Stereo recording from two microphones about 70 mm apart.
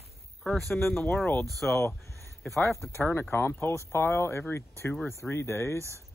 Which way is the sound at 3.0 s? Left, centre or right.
Left.